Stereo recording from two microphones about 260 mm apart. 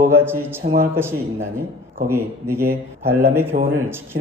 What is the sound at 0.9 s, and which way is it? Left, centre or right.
A man's voice, centre.